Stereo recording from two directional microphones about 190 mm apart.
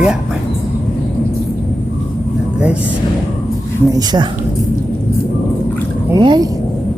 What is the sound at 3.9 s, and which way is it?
Speech, 20° right (ahead or behind).